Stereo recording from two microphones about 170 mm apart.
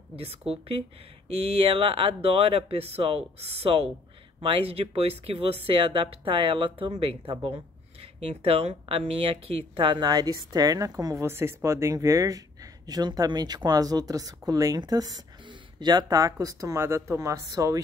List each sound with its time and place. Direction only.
0.5 s speech: 35° right (ahead or behind); by 17.7 s 20° right (ahead or behind)